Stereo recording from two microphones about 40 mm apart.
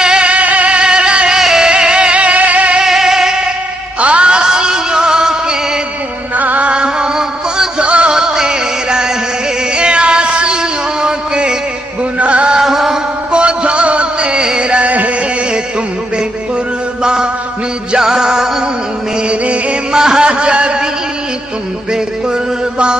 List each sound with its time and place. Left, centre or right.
0.0 s music: right
1.4 s music: centre; by 2.8 s right
2.8 s music: centre
4.0 s music: right
6.3 s music: right
6.7 s music: right
12.5 s music: centre
13.3 s music: right
17.0 s music: right
19.2 s music: right
19.9 s a sound: centre
21.9 s music: right